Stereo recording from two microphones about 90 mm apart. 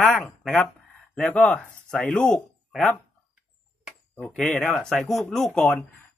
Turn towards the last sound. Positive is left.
turn(degrees=5)  # may be behind; listen again after turning